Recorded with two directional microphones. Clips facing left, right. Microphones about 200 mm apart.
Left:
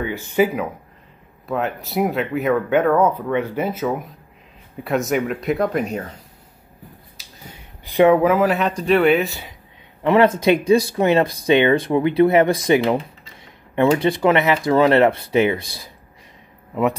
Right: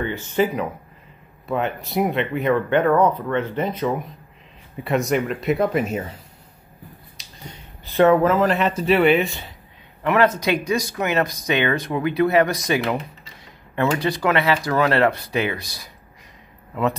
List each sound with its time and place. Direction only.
0.0 s speech: 10° left (ahead or behind); by 6.1 s 5° right (ahead or behind)
7.2 s speech: 10° left (ahead or behind)
10.0 s speech: 25° left (ahead or behind)